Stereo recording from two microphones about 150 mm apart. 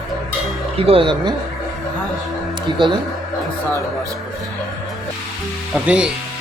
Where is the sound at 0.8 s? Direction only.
40° right (ahead or behind).